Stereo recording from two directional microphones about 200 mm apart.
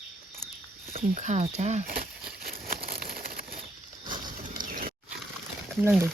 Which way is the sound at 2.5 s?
50° right (ahead or behind).